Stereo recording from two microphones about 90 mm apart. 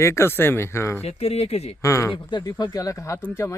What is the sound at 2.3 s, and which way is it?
Speech, 55° left (ahead or behind).